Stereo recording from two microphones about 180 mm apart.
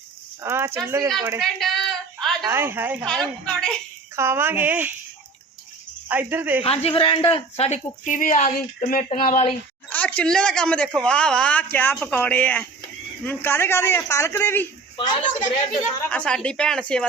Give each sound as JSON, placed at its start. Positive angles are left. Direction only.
{"t": 0.4, "sound": "speech", "side_deg": -15}
{"t": 1.4, "sound": "a sound", "side_deg": 0}
{"t": 2.5, "sound": "speech", "side_deg": -15}
{"t": 3.1, "sound": "a woman's voice", "side_deg": 5}
{"t": 4.1, "sound": "speech", "side_deg": -15}
{"t": 6.1, "sound": "speech", "side_deg": -10}
{"t": 6.6, "sound": "speech", "side_deg": 30}
{"t": 9.9, "sound": "speech", "side_deg": 10}
{"t": 14.9, "sound": "a woman's voice", "side_deg": 25}
{"t": 16.0, "sound": "a woman's voice", "side_deg": 5}